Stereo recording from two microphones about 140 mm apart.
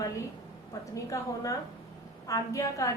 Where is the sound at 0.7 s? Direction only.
25° left (ahead or behind).